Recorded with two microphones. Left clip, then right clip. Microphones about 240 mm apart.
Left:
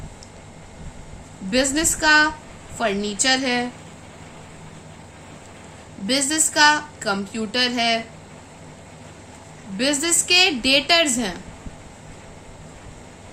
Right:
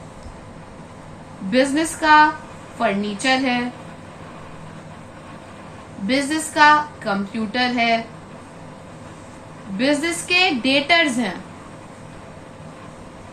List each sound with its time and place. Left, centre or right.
1.5 s a woman's voice: left
6.1 s a woman's voice: left
9.7 s a woman's voice: left